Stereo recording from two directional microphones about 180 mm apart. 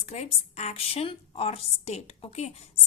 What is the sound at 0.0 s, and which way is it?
A woman's voice, 40° left (ahead or behind).